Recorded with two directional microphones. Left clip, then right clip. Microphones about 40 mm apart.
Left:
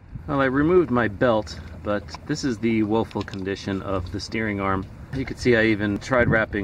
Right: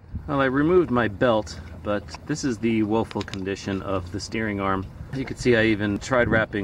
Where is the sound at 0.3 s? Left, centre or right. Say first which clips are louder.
Left 1 dB; centre.